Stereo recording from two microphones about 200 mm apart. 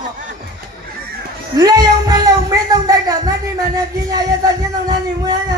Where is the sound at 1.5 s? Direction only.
20° right (ahead or behind).